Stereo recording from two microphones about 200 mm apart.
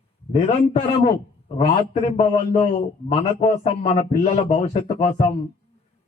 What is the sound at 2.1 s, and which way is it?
A man's voice, 30° left (ahead or behind).